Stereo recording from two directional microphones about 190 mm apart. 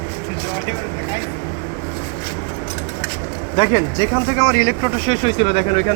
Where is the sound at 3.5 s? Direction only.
25° left (ahead or behind).